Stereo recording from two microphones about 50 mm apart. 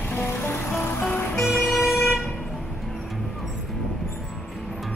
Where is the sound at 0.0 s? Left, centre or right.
Left.